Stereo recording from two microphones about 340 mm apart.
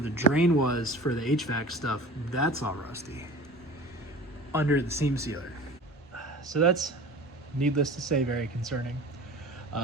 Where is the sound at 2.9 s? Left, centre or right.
Centre.